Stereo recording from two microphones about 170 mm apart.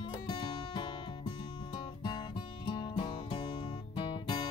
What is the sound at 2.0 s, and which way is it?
Music, 25° left (ahead or behind).